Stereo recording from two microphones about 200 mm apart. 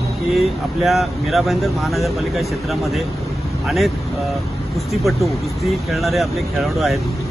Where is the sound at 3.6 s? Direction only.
Centre (ahead or behind).